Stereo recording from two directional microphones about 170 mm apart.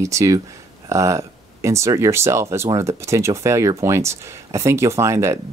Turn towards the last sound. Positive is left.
turn(degrees=-15)  # may be behind; listen again after turning